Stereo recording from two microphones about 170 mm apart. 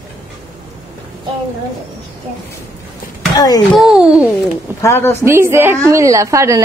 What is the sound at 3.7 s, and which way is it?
Speech, 5° right (ahead or behind).